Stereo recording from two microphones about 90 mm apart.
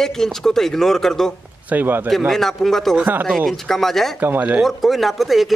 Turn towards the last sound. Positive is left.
turn(degrees=0)  # may be behind; listen again after turning